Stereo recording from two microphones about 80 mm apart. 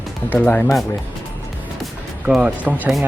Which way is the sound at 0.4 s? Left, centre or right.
Left.